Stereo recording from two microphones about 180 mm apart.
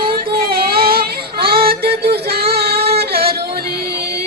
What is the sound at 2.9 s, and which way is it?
Music, 60° right (ahead or behind).